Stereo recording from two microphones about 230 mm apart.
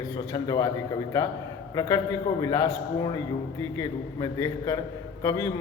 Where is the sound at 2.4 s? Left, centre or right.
Centre.